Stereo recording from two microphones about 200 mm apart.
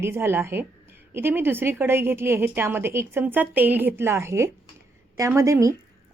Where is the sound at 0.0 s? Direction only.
10° right (ahead or behind).